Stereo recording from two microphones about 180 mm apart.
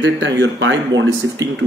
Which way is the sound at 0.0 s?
85° right.